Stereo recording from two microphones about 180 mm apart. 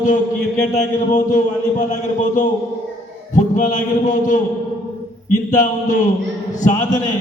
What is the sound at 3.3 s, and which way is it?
A man's voice, 45° left (ahead or behind).